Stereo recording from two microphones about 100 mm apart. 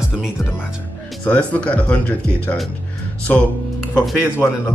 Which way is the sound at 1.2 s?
15° left (ahead or behind).